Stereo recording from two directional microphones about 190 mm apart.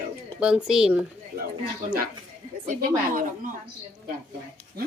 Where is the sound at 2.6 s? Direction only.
45° right (ahead or behind).